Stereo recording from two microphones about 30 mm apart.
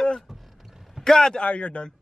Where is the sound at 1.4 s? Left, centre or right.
Left.